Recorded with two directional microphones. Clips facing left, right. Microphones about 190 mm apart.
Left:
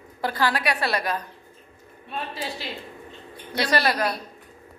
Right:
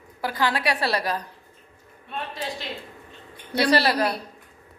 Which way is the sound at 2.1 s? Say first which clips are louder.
Even; 5° left (ahead or behind).